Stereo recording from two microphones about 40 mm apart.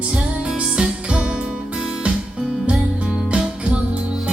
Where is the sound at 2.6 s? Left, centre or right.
Right.